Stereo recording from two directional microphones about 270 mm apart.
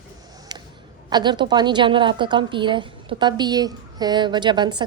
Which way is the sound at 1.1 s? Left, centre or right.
Centre.